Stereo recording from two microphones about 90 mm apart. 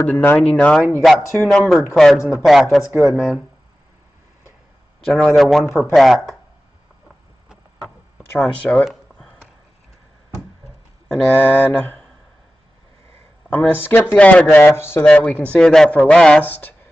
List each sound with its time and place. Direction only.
0.0 s mantra: 20° left (ahead or behind)
0.4 s speech: 10° left (ahead or behind); by 3.4 s 5° right (ahead or behind)
5.0 s speech: centre (ahead or behind)
8.4 s speech: 15° left (ahead or behind)
8.8 s a sound: 5° left (ahead or behind)
11.3 s mantra: 20° left (ahead or behind)
13.5 s mantra: 20° left (ahead or behind)
14.1 s speech: 15° left (ahead or behind)
14.7 s mantra: 25° left (ahead or behind)
15.0 s speech: 15° left (ahead or behind)
16.4 s mantra: 20° left (ahead or behind)